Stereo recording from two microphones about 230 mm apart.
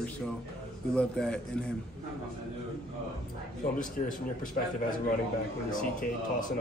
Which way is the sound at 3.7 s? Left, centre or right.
Left.